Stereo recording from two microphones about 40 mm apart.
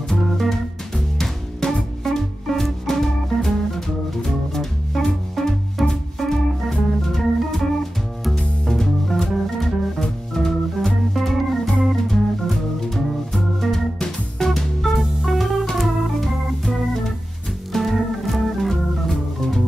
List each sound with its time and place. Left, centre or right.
0.1 s music: centre
10.3 s organ: centre
13.9 s music: centre
14.5 s music: centre
15.6 s organ: centre